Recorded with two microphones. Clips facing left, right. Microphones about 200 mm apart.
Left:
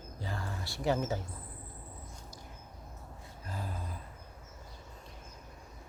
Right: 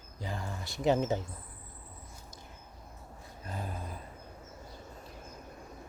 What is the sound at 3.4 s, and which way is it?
Speech, 20° right (ahead or behind).